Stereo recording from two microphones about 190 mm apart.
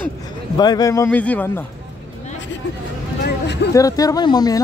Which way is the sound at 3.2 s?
60° left (ahead or behind).